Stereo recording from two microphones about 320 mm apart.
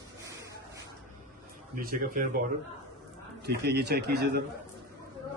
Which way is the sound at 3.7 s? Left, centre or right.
Right.